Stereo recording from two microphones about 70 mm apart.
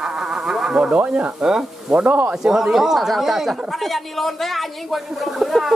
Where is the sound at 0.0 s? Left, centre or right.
Centre.